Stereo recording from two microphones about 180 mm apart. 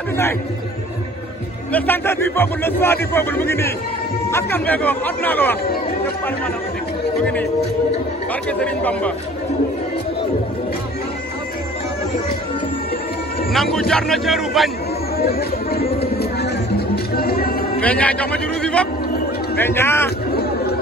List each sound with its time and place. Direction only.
1.7 s speech: 10° left (ahead or behind)
8.5 s speech: 5° left (ahead or behind)
13.5 s a man's voice: centre (ahead or behind)
15.1 s speech: 60° left (ahead or behind)
16.2 s music: 60° left (ahead or behind)
17.8 s speech: 10° left (ahead or behind)